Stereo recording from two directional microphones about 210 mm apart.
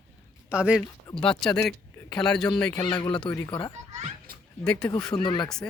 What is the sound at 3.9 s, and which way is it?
Children playing, 35° right (ahead or behind).